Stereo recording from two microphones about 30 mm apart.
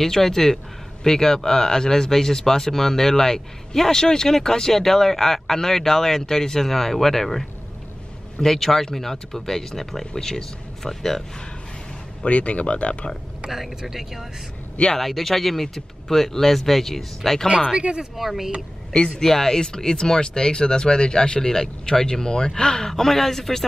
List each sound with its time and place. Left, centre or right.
0.0 s speech: centre
12.3 s speech: left
13.5 s speech: centre
15.0 s speech: centre
17.7 s speech: right
18.1 s speech: centre
19.1 s speech: centre
22.8 s speech: centre